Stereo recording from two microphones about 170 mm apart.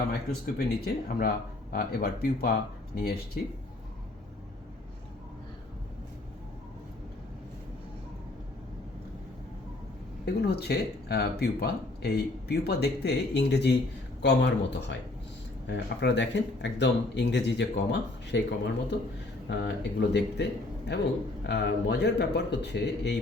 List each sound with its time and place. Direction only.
0.9 s speech: 65° left (ahead or behind)
10.2 s speech: 70° left (ahead or behind); by 23.1 s 85° left